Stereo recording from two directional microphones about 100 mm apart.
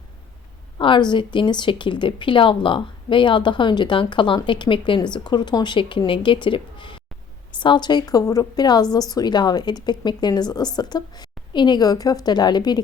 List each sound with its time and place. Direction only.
0.8 s a woman's voice: 55° left (ahead or behind)